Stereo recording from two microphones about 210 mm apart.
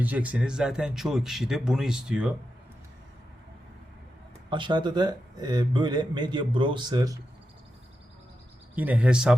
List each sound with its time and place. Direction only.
0.0 s speech: 5° right (ahead or behind)
4.4 s a man's voice: 25° right (ahead or behind)
8.7 s speech: 5° right (ahead or behind)